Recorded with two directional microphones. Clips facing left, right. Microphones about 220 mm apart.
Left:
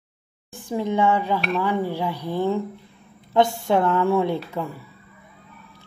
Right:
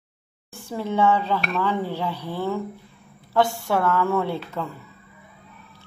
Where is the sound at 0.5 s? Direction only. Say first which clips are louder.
Left 3 dB; 15° left (ahead or behind).